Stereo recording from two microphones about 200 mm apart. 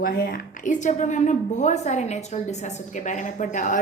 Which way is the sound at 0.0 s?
45° left (ahead or behind).